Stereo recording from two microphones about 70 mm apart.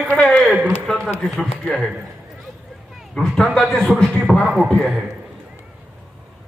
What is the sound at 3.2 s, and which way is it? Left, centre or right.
Speech, centre.